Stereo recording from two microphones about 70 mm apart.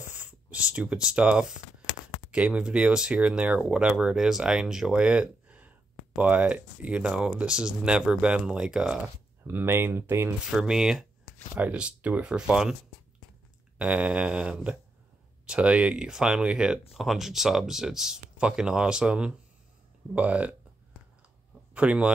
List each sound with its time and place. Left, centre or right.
0.0 s a sound: right
2.3 s speech: centre
9.5 s speech: right
10.5 s speech: centre
13.7 s speech: centre
21.7 s speech: centre